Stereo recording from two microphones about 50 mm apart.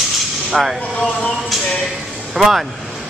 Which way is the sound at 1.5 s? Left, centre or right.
Centre.